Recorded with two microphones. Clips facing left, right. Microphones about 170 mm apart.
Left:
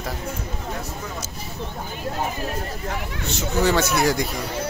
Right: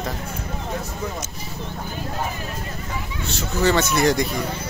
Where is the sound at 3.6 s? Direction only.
10° left (ahead or behind).